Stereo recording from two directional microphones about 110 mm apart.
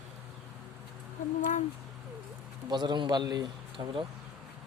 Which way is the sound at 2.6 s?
40° right (ahead or behind).